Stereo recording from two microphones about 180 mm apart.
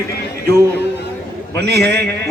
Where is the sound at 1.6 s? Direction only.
65° right (ahead or behind).